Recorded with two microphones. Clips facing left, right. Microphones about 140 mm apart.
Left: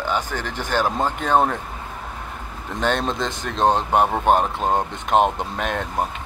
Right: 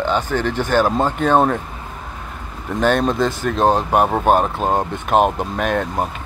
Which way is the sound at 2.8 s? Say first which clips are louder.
Right 6 dB; 20° left (ahead or behind).